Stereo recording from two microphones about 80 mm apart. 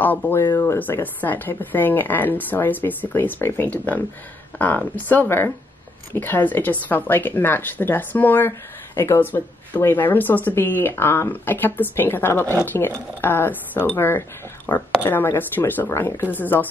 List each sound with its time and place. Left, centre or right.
0.0 s speech: left
14.7 s speech: left
15.0 s speech: left